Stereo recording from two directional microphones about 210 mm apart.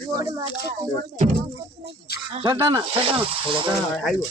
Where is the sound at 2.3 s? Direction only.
20° right (ahead or behind).